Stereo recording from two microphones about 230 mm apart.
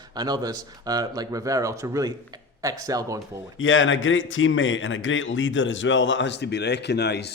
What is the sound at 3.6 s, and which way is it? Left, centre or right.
Speech, left.